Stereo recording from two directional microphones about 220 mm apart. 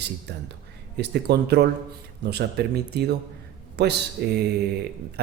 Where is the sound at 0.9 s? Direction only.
50° right (ahead or behind).